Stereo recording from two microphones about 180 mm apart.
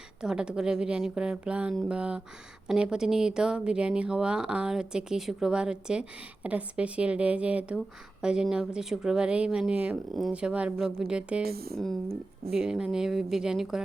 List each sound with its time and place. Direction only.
0.2 s speech: 5° right (ahead or behind)
11.4 s speech: 60° right (ahead or behind)
12.5 s speech: 5° right (ahead or behind)